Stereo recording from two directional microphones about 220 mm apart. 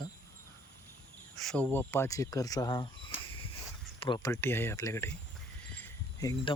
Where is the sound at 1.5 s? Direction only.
10° left (ahead or behind).